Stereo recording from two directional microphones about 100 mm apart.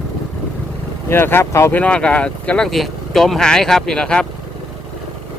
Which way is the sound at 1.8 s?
10° left (ahead or behind).